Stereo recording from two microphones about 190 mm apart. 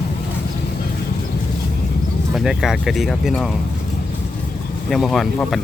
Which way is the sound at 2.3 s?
Centre (ahead or behind).